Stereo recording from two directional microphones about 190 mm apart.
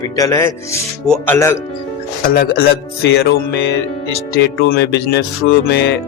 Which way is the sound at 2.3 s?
55° left (ahead or behind).